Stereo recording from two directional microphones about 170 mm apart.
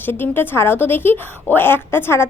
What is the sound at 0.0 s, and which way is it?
A woman's voice, 15° left (ahead or behind).